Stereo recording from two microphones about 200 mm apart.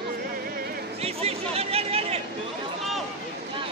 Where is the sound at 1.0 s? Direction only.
30° right (ahead or behind).